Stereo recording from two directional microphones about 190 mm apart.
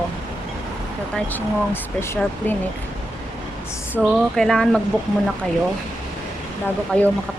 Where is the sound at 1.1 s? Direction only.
10° left (ahead or behind).